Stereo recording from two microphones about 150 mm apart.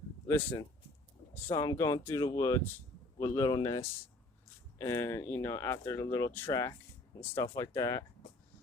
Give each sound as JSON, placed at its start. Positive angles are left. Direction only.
{"t": 0.3, "sound": "speech", "side_deg": 20}
{"t": 4.8, "sound": "speech", "side_deg": 15}